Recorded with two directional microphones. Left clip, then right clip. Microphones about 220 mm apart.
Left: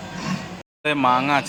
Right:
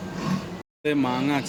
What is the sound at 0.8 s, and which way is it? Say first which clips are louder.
Speech: left 6 dB; 5° right (ahead or behind).